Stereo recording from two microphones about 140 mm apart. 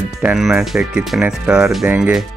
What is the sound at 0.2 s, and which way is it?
Speech, 5° right (ahead or behind).